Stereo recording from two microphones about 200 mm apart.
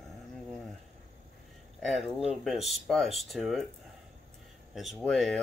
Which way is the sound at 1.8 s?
Centre (ahead or behind).